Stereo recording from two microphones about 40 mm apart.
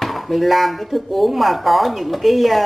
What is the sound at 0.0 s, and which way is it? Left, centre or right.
Speech, centre.